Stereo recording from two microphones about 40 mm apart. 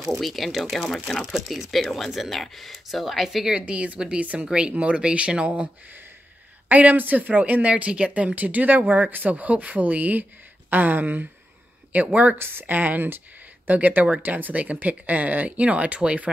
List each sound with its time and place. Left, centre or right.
0.2 s speech: centre
3.3 s speech: centre
3.5 s speech: right
6.7 s speech: right
12.4 s speech: right
12.6 s speech: right